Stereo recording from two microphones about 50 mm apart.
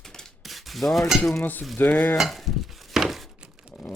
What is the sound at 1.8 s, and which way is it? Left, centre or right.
Speech, left.